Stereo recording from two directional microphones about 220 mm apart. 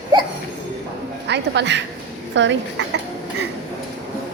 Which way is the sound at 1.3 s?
50° right (ahead or behind).